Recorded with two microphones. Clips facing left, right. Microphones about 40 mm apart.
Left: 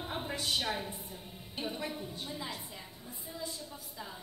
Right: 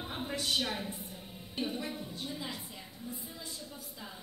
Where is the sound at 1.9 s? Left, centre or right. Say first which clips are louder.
Even; centre.